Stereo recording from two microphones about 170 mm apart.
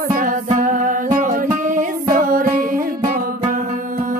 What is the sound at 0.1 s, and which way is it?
Music, 50° right (ahead or behind).